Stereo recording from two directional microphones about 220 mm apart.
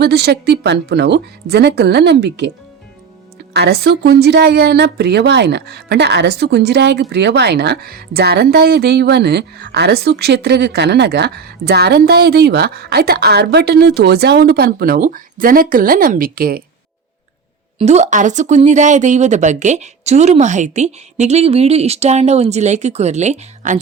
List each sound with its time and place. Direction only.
0.0 s a woman's voice: 45° right (ahead or behind)
3.5 s a woman's voice: 45° right (ahead or behind)
17.7 s speech: 30° right (ahead or behind)